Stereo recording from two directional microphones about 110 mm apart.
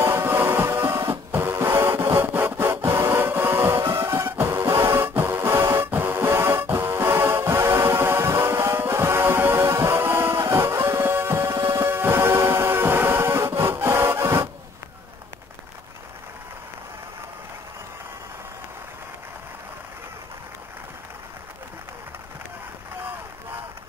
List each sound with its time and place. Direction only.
0.0 s music: 20° right (ahead or behind)